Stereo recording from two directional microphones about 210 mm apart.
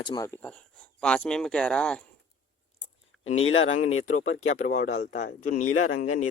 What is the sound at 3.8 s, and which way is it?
Speech, 85° left.